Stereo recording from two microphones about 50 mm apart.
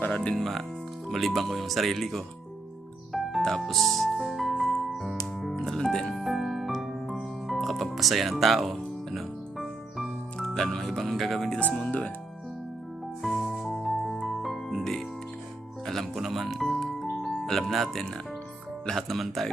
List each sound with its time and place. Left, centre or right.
0.1 s speech: centre
0.3 s speech: centre
3.1 s music: centre
5.7 s music: centre
6.1 s music: centre
10.5 s speech: centre
11.9 s speech: left
13.2 s music: centre
16.1 s music: centre
18.9 s speech: centre